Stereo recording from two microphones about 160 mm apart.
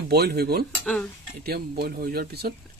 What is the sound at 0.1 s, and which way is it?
Speech, 80° right.